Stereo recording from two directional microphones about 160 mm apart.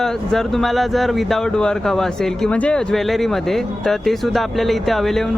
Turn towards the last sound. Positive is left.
turn(degrees=0)  # may be behind; listen again after turning